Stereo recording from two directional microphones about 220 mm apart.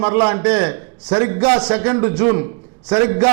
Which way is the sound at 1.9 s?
20° right (ahead or behind).